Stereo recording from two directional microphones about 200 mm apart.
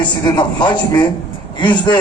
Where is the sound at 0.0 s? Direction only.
20° left (ahead or behind).